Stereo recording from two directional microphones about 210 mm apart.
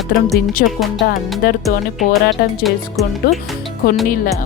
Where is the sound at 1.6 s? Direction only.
Centre (ahead or behind).